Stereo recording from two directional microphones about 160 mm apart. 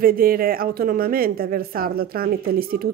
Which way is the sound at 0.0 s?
65° right (ahead or behind).